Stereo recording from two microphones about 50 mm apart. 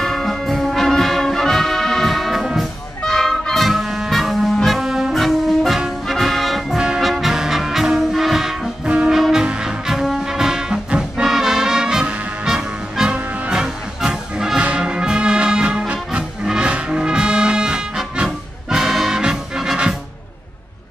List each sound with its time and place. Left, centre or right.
0.0 s brass instrument: centre
2.4 s music: centre
3.2 s music: centre
4.1 s brass instrument: centre
5.1 s brass instrument: centre
6.0 s music: centre
8.8 s brass instrument: right
9.3 s music: centre